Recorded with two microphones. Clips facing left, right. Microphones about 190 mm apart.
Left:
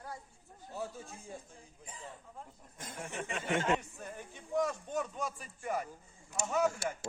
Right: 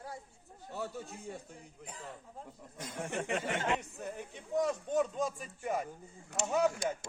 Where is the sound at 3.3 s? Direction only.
40° right (ahead or behind).